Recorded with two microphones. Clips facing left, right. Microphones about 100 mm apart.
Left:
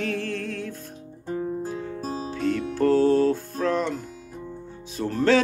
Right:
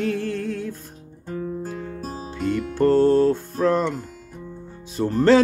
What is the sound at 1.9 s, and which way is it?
Music, 35° left (ahead or behind).